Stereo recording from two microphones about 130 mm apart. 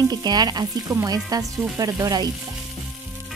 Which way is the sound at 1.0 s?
30° right (ahead or behind).